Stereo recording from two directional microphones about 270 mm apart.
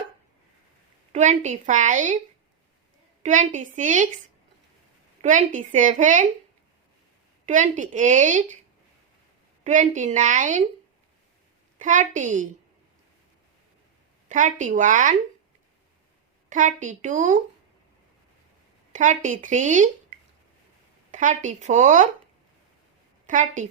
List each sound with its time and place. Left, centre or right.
1.1 s speech: right
3.2 s speech: right
5.2 s speech: right
7.4 s speech: right
9.6 s speech: right
11.8 s speech: right
14.3 s speech: right
16.5 s speech: right
18.9 s speech: right
23.2 s a woman's voice: right